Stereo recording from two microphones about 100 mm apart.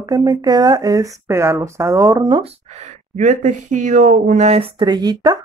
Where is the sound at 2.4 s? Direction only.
90° right.